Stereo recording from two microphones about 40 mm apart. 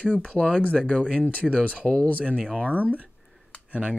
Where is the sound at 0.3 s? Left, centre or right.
Left.